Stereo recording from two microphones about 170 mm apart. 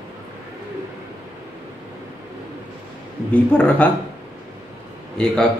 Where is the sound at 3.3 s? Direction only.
5° left (ahead or behind).